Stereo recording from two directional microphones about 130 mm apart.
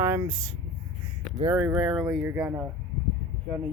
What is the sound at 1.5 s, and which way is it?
Speech, 20° right (ahead or behind).